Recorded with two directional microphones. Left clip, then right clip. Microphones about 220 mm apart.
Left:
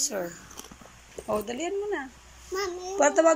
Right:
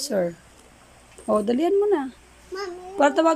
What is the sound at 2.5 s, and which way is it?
Child singing, 10° right (ahead or behind).